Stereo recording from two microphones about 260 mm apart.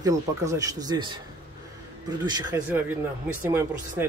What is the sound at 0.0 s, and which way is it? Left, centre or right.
Speech, centre.